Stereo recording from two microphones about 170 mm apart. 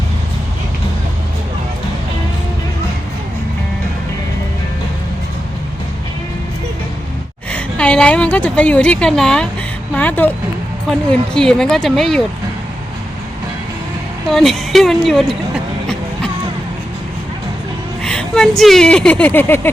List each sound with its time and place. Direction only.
7.5 s a woman's voice: 5° left (ahead or behind)
14.3 s a woman's voice: centre (ahead or behind)
18.0 s speech: 5° left (ahead or behind)